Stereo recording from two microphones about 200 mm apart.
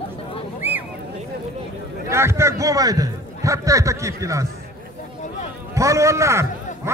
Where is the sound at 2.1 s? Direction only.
15° right (ahead or behind).